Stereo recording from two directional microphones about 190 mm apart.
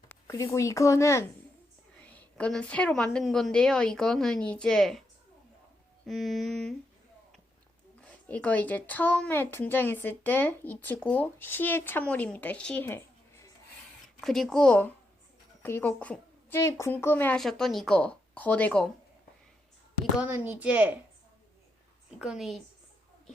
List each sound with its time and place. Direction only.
0.1 s a woman's voice: 15° left (ahead or behind)
6.1 s a woman's voice: centre (ahead or behind)
8.3 s speech: 5° left (ahead or behind)
14.2 s a woman's voice: centre (ahead or behind)
20.1 s speech: 10° right (ahead or behind)
22.2 s a woman's voice: centre (ahead or behind)